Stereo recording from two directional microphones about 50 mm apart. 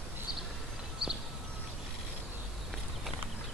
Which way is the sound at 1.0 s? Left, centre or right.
Centre.